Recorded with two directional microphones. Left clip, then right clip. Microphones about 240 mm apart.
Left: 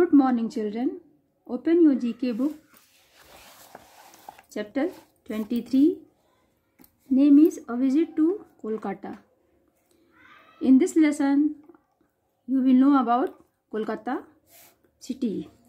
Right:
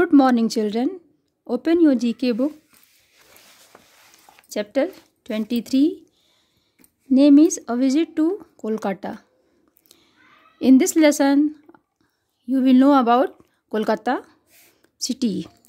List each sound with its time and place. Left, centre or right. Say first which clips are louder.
0.0 s a woman's voice: right 5 dB; right
4.5 s speech: right 7 dB; right
7.2 s a woman's voice: right 4 dB; right
10.6 s a woman's voice: right 5 dB; right
11.7 s a sound: right 3 dB; right
12.4 s a woman's voice: right 5 dB; right